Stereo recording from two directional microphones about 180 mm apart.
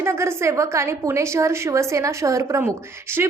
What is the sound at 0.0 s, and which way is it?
A woman's voice, 15° right (ahead or behind).